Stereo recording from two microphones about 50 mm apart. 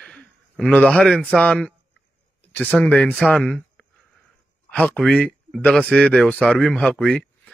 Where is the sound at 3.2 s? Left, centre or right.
Centre.